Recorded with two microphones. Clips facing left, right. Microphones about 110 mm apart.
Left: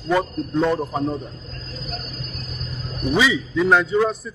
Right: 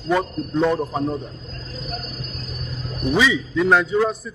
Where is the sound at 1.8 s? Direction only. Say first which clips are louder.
Right 2 dB; 15° right (ahead or behind).